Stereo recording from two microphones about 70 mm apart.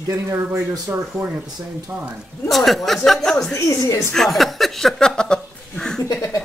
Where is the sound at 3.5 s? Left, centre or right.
Left.